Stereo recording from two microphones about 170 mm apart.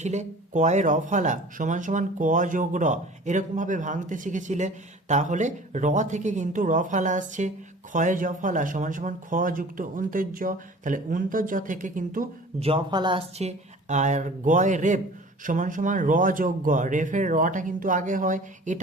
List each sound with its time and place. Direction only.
0.0 s speech: 40° right (ahead or behind)
12.5 s speech: 35° right (ahead or behind)